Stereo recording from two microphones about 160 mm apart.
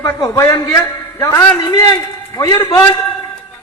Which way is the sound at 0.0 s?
20° left (ahead or behind).